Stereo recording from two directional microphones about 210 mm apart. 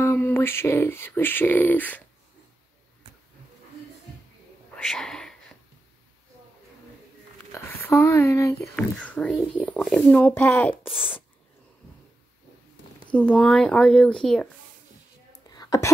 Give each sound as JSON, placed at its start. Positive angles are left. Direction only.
{"t": 0.0, "sound": "speech", "side_deg": 10}
{"t": 4.9, "sound": "a sound", "side_deg": 0}
{"t": 7.5, "sound": "speech", "side_deg": 10}
{"t": 10.9, "sound": "speech", "side_deg": -5}
{"t": 13.1, "sound": "speech", "side_deg": 5}
{"t": 15.4, "sound": "whispering", "side_deg": 20}